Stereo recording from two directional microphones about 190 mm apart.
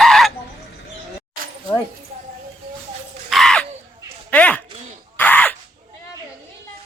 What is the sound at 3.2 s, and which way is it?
Crow, centre (ahead or behind).